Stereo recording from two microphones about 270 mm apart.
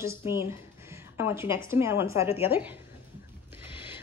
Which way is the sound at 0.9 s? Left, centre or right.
Centre.